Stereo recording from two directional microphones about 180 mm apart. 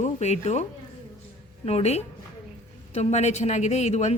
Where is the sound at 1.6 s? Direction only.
35° left (ahead or behind).